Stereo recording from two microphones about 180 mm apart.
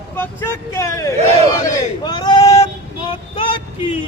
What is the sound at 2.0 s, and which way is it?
Male singing, 25° left (ahead or behind).